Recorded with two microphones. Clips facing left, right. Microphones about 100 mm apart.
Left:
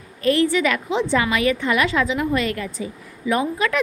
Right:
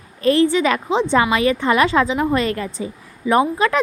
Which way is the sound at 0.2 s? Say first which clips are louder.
Right 3 dB; 30° right (ahead or behind).